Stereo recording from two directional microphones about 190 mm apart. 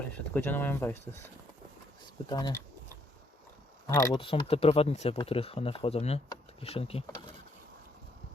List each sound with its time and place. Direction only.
0.1 s speech: 10° left (ahead or behind)
2.3 s speech: 15° left (ahead or behind)
3.8 s speech: 20° left (ahead or behind)